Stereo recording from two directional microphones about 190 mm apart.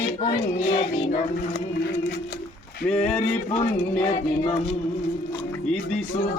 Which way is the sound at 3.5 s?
40° left (ahead or behind).